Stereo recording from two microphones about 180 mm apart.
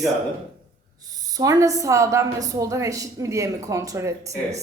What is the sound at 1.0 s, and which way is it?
Speech, 20° right (ahead or behind).